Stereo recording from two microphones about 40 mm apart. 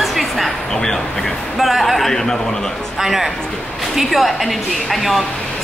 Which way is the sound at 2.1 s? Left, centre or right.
Centre.